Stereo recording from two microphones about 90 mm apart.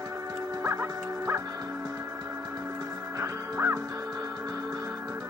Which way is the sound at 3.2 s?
30° right (ahead or behind).